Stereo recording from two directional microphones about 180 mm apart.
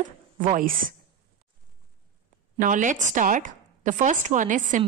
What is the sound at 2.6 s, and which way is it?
A woman's voice, 45° right (ahead or behind).